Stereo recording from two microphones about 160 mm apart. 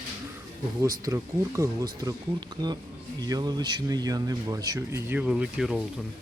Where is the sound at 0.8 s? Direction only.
20° right (ahead or behind); by 5.8 s 5° right (ahead or behind).